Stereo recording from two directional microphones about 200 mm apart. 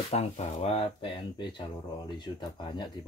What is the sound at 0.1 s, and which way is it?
Speech, 30° left (ahead or behind).